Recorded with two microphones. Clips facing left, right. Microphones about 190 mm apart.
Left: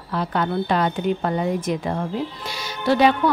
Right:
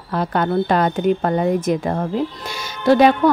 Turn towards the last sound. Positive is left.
turn(degrees=-45)  # may be behind; listen again after turning